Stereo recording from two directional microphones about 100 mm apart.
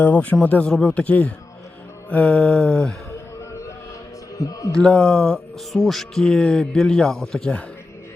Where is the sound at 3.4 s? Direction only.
30° left (ahead or behind).